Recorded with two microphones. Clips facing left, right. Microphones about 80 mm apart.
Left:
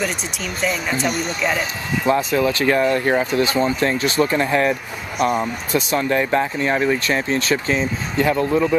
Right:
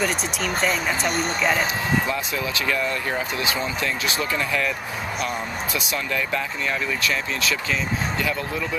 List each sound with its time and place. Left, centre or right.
0.6 s speech: centre
2.0 s speech: left